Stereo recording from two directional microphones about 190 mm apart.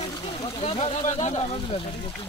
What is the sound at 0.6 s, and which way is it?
Speech, 30° left (ahead or behind).